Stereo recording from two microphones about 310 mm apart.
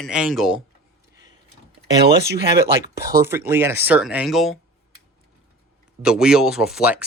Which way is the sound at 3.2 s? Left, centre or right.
Centre.